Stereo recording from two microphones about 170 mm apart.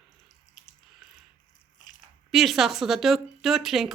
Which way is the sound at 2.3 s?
Centre (ahead or behind).